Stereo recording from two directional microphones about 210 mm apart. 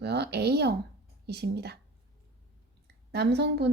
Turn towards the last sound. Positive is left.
turn(degrees=-55)  # may be behind; listen again after turning